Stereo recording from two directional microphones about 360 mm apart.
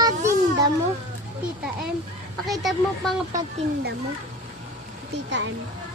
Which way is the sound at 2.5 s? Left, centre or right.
Centre.